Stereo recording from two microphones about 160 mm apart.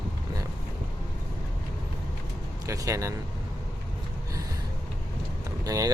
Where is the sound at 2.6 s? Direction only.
20° right (ahead or behind).